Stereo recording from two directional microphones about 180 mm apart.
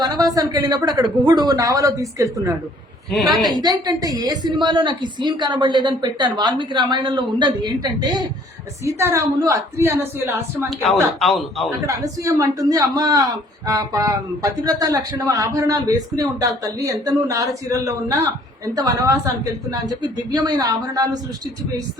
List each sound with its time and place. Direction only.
0.0 s a man's voice: 20° right (ahead or behind)
3.1 s a man's voice: centre (ahead or behind)
3.5 s a man's voice: 25° right (ahead or behind)
11.2 s a man's voice: centre (ahead or behind)
11.9 s a man's voice: 15° right (ahead or behind)